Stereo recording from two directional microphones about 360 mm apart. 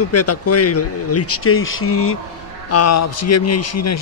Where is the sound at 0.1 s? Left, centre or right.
Left.